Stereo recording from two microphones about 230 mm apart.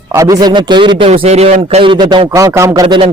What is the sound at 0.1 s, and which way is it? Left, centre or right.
A man's voice, centre.